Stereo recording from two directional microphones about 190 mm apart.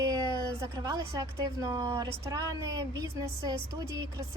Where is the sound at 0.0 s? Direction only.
20° right (ahead or behind).